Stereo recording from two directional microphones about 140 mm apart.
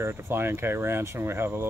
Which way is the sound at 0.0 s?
15° right (ahead or behind).